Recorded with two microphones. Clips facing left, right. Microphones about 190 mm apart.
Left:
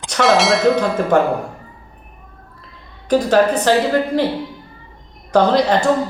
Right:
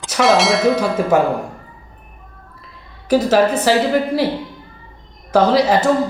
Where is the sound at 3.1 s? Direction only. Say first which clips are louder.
Even; 5° right (ahead or behind).